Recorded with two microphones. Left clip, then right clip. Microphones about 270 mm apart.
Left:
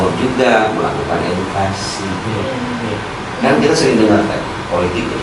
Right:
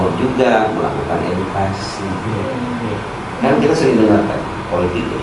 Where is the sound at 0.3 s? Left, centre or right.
Centre.